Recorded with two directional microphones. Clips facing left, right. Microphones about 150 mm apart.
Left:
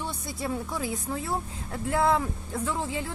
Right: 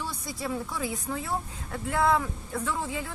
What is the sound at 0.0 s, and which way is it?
A woman's voice, 25° left (ahead or behind).